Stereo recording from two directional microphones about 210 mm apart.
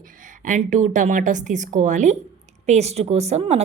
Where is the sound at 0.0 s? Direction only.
40° right (ahead or behind).